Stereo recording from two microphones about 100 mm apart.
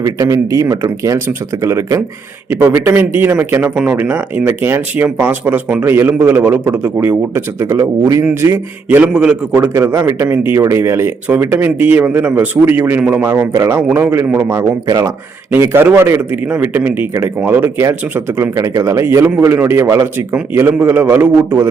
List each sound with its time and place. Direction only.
0.0 s a man's voice: 35° right (ahead or behind)
9.1 s speech: 10° right (ahead or behind)
9.6 s a man's voice: 30° right (ahead or behind); by 13.2 s 15° right (ahead or behind)
13.2 s a man's voice: 25° right (ahead or behind)
14.8 s speech: 35° right (ahead or behind)
15.5 s a man's voice: 20° right (ahead or behind)